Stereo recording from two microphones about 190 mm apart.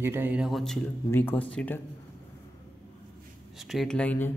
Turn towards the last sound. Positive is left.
turn(degrees=5)  # may be behind; listen again after turning